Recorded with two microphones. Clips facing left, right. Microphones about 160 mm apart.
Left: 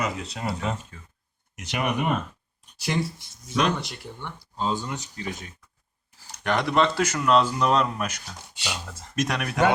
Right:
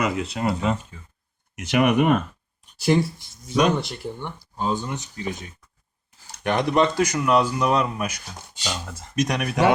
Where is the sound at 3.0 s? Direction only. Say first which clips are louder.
Right 1 dB; centre (ahead or behind).